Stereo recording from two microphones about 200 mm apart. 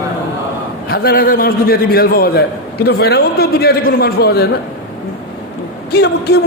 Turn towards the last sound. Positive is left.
turn(degrees=55)  # may be behind; listen again after turning